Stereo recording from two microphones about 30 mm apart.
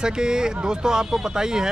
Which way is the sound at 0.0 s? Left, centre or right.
Right.